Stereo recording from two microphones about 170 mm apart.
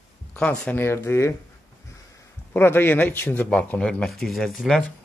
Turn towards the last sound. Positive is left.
turn(degrees=5)  # may be behind; listen again after turning